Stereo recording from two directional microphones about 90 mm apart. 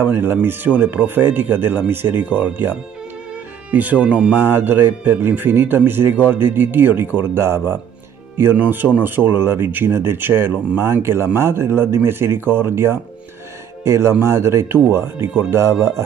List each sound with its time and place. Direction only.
0.0 s speech: 25° right (ahead or behind)
3.7 s speech: 20° right (ahead or behind)